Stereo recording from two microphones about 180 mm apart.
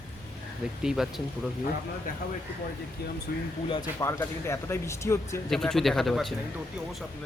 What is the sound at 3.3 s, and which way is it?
Speech, 60° left (ahead or behind).